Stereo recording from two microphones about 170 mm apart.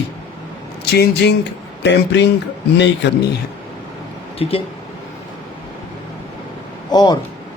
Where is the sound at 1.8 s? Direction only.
90° left.